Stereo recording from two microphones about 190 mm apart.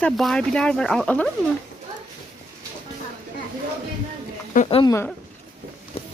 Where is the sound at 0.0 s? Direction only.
5° left (ahead or behind).